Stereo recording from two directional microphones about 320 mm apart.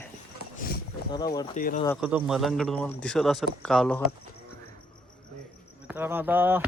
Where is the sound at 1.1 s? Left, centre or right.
Centre.